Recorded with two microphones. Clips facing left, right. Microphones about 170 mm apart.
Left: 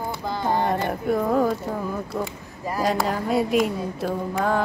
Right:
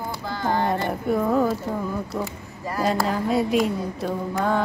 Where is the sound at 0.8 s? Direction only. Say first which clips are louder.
Even; centre (ahead or behind).